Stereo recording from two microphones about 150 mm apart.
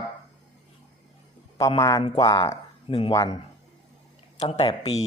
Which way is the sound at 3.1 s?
25° left (ahead or behind).